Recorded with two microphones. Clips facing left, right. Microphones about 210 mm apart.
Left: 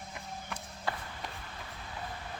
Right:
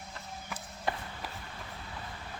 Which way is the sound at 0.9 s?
20° right (ahead or behind).